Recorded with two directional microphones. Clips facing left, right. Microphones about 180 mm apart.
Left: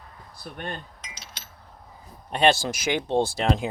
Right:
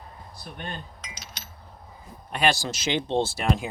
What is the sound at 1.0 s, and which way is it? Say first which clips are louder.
Chink: right 1 dB; 30° left (ahead or behind).